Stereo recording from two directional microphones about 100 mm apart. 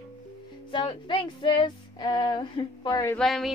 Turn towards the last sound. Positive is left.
turn(degrees=0)  # may be behind; listen again after turning